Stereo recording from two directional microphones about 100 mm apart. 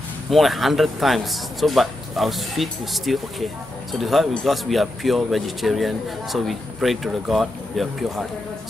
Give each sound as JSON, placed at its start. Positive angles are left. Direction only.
{"t": 0.3, "sound": "a man's voice", "side_deg": 0}